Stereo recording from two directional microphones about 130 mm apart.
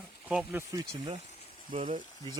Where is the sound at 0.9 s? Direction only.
45° right (ahead or behind).